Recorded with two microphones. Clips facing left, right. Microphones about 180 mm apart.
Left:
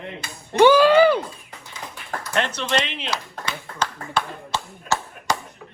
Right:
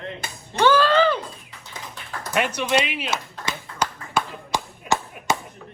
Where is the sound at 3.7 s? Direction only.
45° left (ahead or behind).